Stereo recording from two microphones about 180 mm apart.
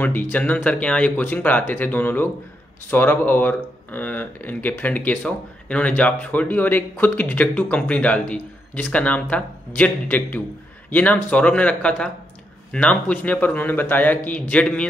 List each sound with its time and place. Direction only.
0.0 s speech: 10° left (ahead or behind)